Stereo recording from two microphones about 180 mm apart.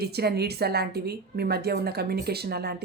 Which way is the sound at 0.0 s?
60° right (ahead or behind).